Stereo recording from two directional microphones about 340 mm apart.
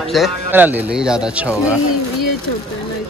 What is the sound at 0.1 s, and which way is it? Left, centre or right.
Speech, centre.